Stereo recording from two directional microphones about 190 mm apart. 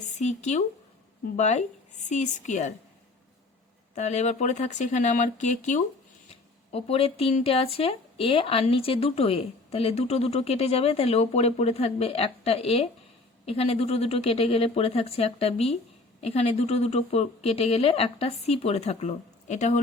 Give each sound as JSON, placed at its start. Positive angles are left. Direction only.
{"t": 0.0, "sound": "speech", "side_deg": 40}
{"t": 3.9, "sound": "speech", "side_deg": 35}